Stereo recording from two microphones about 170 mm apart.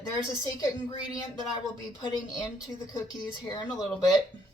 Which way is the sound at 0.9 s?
25° left (ahead or behind).